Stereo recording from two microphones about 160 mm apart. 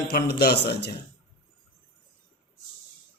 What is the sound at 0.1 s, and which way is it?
Speech, 75° left (ahead or behind).